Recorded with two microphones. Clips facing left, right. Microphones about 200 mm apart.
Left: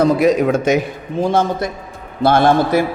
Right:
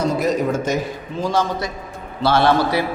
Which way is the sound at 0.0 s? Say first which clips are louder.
Left 6 dB; 65° left (ahead or behind).